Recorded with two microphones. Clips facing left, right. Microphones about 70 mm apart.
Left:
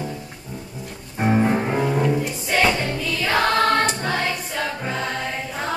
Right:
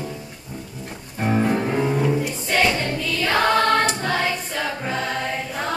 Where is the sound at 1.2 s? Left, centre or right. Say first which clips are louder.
Left 1 dB; left.